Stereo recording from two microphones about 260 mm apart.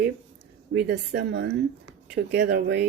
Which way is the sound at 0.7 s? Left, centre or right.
Right.